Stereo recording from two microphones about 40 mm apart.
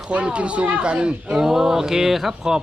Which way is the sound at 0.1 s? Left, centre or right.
Right.